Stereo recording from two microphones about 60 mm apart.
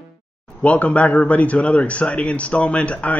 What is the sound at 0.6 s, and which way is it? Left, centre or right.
Speech, left.